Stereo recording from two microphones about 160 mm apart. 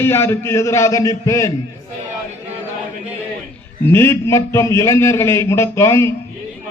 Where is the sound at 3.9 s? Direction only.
15° left (ahead or behind).